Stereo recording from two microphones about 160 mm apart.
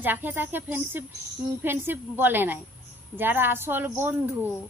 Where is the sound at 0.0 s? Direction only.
10° right (ahead or behind).